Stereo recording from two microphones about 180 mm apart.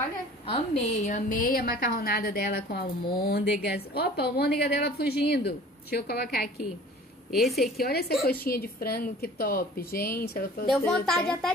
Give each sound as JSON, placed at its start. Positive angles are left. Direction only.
{"t": 0.5, "sound": "a woman's voice", "side_deg": 35}
{"t": 7.2, "sound": "a woman's voice", "side_deg": 0}
{"t": 7.8, "sound": "a woman's voice", "side_deg": 60}